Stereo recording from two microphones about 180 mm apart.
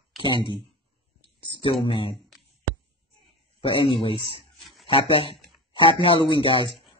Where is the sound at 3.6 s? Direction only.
30° left (ahead or behind).